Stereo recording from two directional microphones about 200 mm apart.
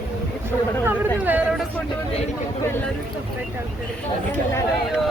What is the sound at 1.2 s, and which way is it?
Speech, 5° right (ahead or behind).